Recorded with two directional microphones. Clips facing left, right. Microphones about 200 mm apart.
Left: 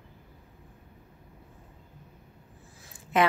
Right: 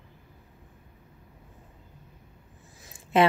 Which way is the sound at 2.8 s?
25° right (ahead or behind).